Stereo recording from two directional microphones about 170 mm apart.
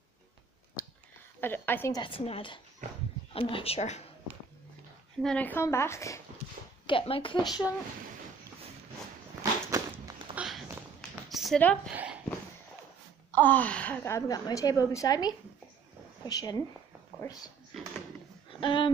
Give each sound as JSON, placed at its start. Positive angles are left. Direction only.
{"t": 1.4, "sound": "a woman's voice", "side_deg": 10}
{"t": 2.0, "sound": "a woman's voice", "side_deg": 30}
{"t": 5.2, "sound": "a woman's voice", "side_deg": 10}
{"t": 6.9, "sound": "speech", "side_deg": 30}
{"t": 9.4, "sound": "a sound", "side_deg": -20}
{"t": 10.3, "sound": "a sound", "side_deg": -5}
{"t": 11.6, "sound": "a woman's voice", "side_deg": 5}
{"t": 11.9, "sound": "a sound", "side_deg": -10}
{"t": 13.3, "sound": "a woman's voice", "side_deg": 10}
{"t": 18.6, "sound": "speech", "side_deg": 30}